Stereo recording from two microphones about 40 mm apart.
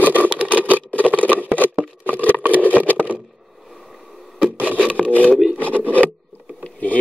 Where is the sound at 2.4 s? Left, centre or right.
Right.